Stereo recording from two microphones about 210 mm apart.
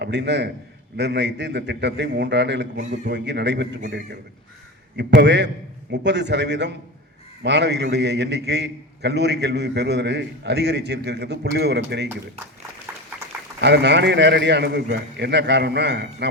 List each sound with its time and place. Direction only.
0.0 s a man's voice: 55° right (ahead or behind)
12.9 s a sound: 10° right (ahead or behind)
13.6 s a man's voice: 55° right (ahead or behind)